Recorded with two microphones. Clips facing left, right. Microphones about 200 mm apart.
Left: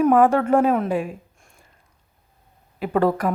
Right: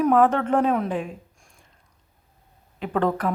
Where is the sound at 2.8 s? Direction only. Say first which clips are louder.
Left 3 dB; 10° left (ahead or behind).